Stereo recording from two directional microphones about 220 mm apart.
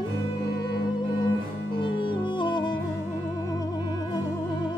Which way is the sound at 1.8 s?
20° left (ahead or behind).